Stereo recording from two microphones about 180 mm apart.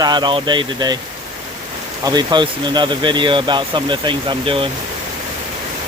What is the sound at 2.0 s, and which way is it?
Speech, 25° right (ahead or behind).